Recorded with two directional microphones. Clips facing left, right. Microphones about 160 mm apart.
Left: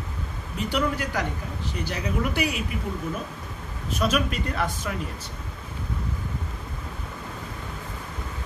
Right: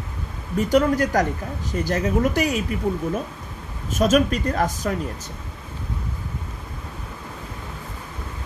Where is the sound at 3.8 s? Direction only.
45° right (ahead or behind).